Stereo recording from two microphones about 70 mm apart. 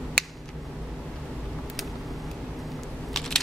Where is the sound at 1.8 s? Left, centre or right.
Centre.